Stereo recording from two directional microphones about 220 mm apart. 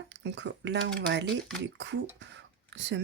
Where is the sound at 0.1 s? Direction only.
50° right (ahead or behind).